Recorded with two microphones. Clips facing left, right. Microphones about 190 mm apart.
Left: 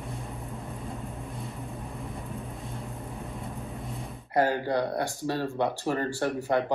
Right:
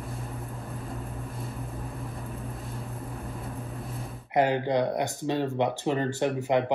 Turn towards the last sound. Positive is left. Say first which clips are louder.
# right 2 dB
turn(degrees=-15)  # may be behind; listen again after turning